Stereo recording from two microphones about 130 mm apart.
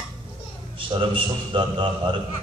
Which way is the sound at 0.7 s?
40° right (ahead or behind).